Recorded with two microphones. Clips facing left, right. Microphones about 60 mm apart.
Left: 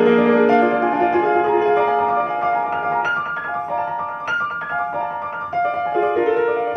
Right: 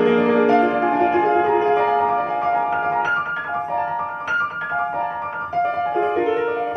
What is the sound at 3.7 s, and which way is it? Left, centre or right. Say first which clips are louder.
Music: even; left.